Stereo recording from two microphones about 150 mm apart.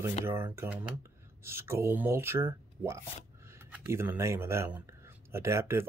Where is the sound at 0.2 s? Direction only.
15° right (ahead or behind).